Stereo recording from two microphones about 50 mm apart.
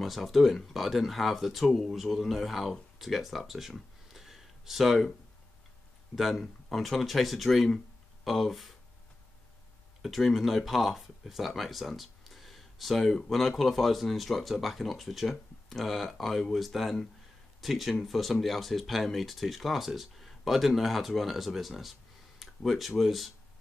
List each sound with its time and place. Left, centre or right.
0.0 s speech: centre
6.1 s speech: centre
10.0 s speech: centre